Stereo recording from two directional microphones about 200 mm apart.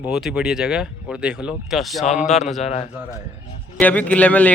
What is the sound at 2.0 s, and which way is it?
Speech, 35° left (ahead or behind).